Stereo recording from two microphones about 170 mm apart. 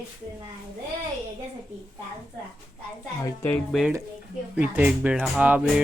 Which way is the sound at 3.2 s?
15° left (ahead or behind).